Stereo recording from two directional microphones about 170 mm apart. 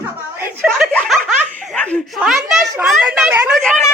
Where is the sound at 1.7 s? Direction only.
10° left (ahead or behind).